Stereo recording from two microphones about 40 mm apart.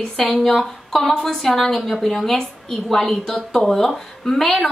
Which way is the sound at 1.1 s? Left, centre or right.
Centre.